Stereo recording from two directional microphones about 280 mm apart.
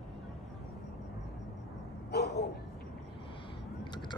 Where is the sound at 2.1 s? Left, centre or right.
Left.